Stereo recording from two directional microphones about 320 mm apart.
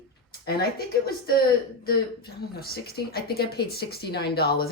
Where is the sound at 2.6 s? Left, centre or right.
Left.